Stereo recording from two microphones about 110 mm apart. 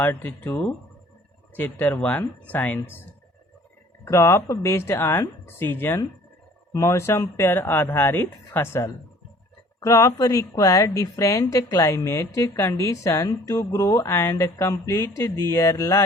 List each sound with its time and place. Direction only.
0.0 s a woman's voice: 20° left (ahead or behind)
4.0 s a woman's voice: 25° left (ahead or behind)